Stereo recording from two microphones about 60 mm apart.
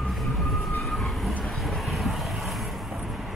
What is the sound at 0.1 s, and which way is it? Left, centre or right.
Vehicle, centre.